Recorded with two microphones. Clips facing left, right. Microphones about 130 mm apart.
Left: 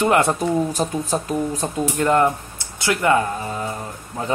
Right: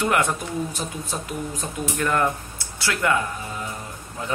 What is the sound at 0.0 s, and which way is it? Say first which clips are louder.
Speech: left 5 dB; 30° left (ahead or behind).